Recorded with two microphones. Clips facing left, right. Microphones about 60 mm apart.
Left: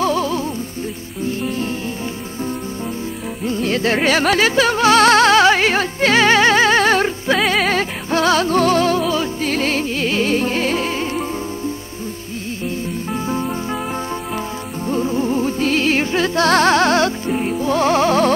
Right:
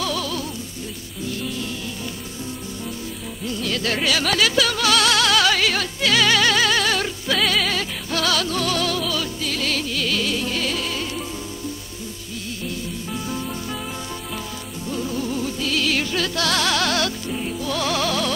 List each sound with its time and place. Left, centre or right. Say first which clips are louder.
0.0 s music: left 7 dB; left
3.4 s music: left 6 dB; left
12.6 s music: left 7 dB; left
14.9 s music: left 7 dB; left